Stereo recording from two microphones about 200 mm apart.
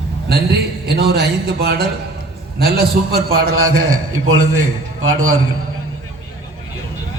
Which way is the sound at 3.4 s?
90° right.